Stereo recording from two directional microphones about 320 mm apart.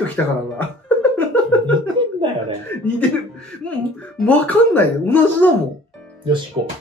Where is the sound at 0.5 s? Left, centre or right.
Centre.